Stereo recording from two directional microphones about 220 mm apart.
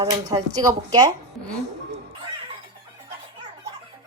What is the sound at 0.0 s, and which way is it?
Speech, 15° right (ahead or behind).